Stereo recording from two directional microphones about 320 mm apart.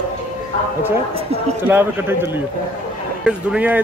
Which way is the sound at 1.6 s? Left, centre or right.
Centre.